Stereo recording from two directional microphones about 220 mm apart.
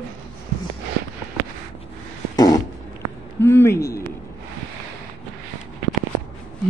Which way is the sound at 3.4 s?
10° left (ahead or behind).